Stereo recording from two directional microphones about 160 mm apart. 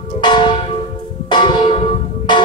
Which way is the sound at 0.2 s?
30° left (ahead or behind).